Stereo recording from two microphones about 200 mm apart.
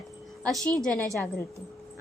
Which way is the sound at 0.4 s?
Centre (ahead or behind).